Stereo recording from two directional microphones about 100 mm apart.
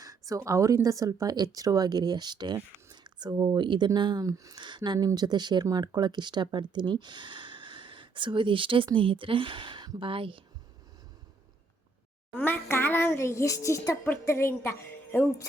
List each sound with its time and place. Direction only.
0.0 s speech: 35° right (ahead or behind)
2.9 s a sound: 45° right (ahead or behind)
3.3 s speech: 35° right (ahead or behind)
3.6 s speech: 50° right (ahead or behind)
4.6 s a woman's voice: 50° right (ahead or behind)
12.3 s a sound: 20° left (ahead or behind)